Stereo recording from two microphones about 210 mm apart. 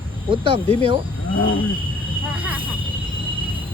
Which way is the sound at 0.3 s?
25° right (ahead or behind).